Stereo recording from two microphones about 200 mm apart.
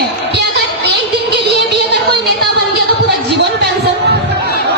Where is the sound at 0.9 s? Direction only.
55° right (ahead or behind).